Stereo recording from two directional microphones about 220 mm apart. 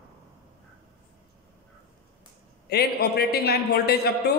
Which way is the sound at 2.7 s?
45° left (ahead or behind).